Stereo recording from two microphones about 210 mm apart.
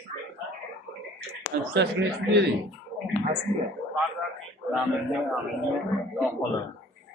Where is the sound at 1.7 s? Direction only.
55° right (ahead or behind).